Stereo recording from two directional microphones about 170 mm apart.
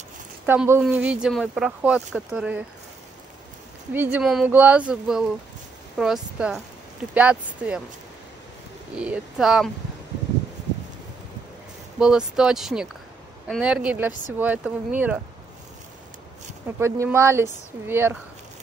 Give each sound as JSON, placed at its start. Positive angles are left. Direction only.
{"t": 0.5, "sound": "speech", "side_deg": -10}
{"t": 3.9, "sound": "speech", "side_deg": -10}
{"t": 8.9, "sound": "speech", "side_deg": -5}
{"t": 12.0, "sound": "speech", "side_deg": -5}
{"t": 16.6, "sound": "speech", "side_deg": -15}